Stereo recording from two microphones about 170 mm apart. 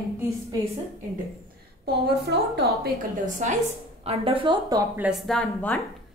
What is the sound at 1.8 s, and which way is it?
Speech, 70° right (ahead or behind).